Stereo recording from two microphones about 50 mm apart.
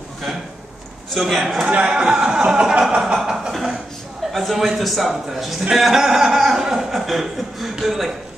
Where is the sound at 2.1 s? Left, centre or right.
Centre.